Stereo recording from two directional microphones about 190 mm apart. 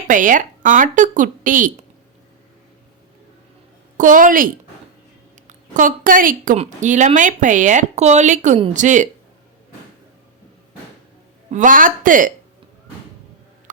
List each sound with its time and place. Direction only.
0.1 s a woman's voice: 45° right (ahead or behind)
3.9 s a woman's voice: 45° right (ahead or behind)
5.5 s a woman's voice: 45° right (ahead or behind)
11.5 s a woman's voice: 45° right (ahead or behind)